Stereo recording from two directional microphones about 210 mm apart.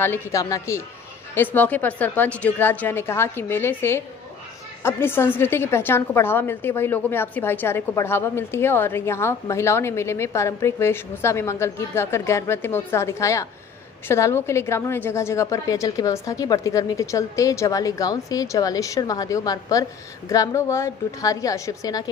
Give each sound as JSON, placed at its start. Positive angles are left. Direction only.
{"t": 0.0, "sound": "a woman's voice", "side_deg": 10}